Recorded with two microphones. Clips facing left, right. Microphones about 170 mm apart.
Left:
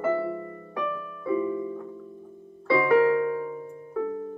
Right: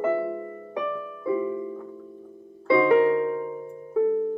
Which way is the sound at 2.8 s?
25° right (ahead or behind).